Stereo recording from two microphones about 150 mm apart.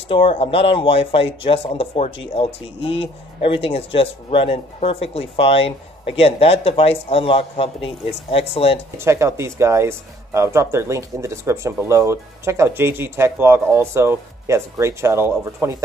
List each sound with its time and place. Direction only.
0.1 s speech: 40° left (ahead or behind)
8.9 s speech: 15° right (ahead or behind)